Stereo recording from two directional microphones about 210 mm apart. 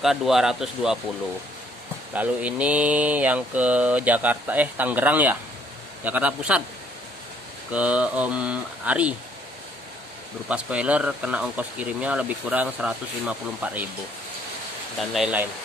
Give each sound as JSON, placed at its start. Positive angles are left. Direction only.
{"t": 0.0, "sound": "speech", "side_deg": 0}
{"t": 2.1, "sound": "speech", "side_deg": -5}
{"t": 7.7, "sound": "speech", "side_deg": -5}
{"t": 10.5, "sound": "speech", "side_deg": -5}
{"t": 15.0, "sound": "speech", "side_deg": -5}